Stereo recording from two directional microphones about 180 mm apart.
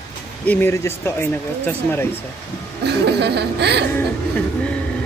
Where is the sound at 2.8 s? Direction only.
65° right (ahead or behind).